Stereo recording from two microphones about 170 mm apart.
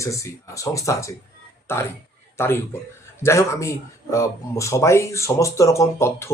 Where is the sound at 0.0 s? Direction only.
20° left (ahead or behind).